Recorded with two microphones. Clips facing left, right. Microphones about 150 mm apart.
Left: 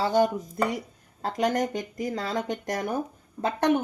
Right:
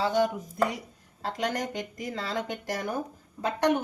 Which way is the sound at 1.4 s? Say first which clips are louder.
Left 6 dB; 45° left (ahead or behind).